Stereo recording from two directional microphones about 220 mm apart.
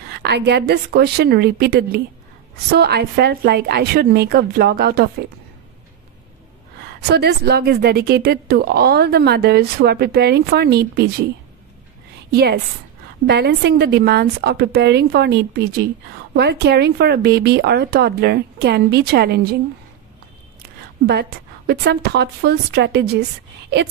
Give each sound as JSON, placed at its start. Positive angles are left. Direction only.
{"t": 0.1, "sound": "a woman's voice", "side_deg": -50}
{"t": 7.1, "sound": "a woman's voice", "side_deg": -50}
{"t": 12.3, "sound": "a woman's voice", "side_deg": -45}
{"t": 21.1, "sound": "a woman's voice", "side_deg": -45}